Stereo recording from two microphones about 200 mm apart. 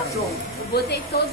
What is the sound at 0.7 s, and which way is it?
Speech, 50° left (ahead or behind).